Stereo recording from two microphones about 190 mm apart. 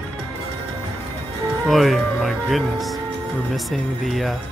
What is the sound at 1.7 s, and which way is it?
Speech, centre (ahead or behind).